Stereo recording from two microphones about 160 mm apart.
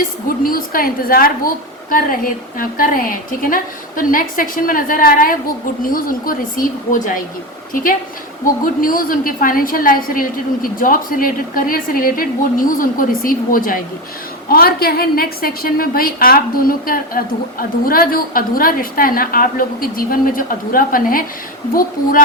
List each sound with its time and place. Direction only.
0.3 s a woman's voice: 65° left (ahead or behind)
8.6 s a woman's voice: 60° left (ahead or behind)
14.5 s a woman's voice: 70° left (ahead or behind)